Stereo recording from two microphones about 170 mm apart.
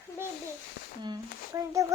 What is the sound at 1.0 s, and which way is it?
Speech, 20° right (ahead or behind).